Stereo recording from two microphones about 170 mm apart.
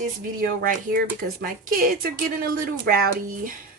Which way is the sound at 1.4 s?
60° right (ahead or behind).